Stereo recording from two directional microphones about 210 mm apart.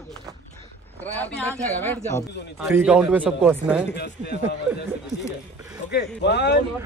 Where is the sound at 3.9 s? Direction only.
50° left (ahead or behind).